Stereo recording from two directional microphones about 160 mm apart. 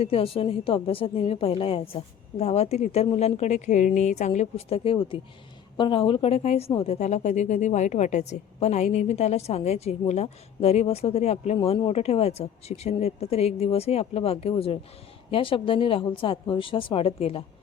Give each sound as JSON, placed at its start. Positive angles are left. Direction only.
{"t": 0.0, "sound": "a woman's voice", "side_deg": 35}